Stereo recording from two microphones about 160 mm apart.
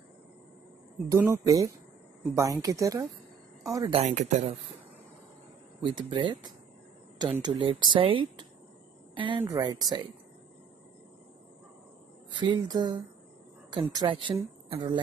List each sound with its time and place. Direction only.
1.1 s speech: 15° right (ahead or behind)
3.9 s speech: 45° right (ahead or behind)
5.8 s speech: 30° right (ahead or behind)
12.3 s speech: 30° right (ahead or behind)